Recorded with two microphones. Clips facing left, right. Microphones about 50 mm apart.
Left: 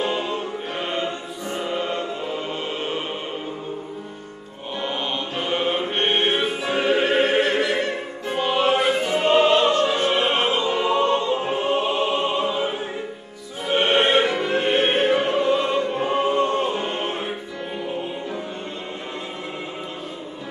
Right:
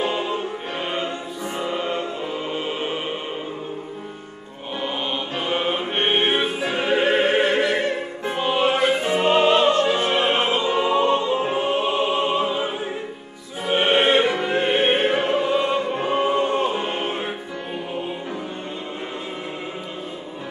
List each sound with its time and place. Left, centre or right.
0.0 s music: centre
4.8 s music: centre
6.7 s opera: centre
8.3 s music: centre
9.2 s opera: centre
9.8 s music: centre
10.5 s opera: centre
13.7 s music: centre